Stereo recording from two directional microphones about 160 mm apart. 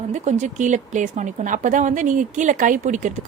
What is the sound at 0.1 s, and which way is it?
A woman's voice, 45° right (ahead or behind).